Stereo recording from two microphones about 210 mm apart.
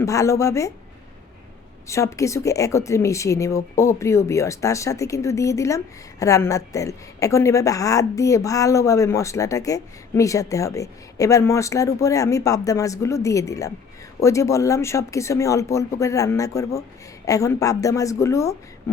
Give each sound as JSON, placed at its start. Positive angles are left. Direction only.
{"t": 0.0, "sound": "a woman's voice", "side_deg": 15}
{"t": 1.9, "sound": "a woman's voice", "side_deg": 15}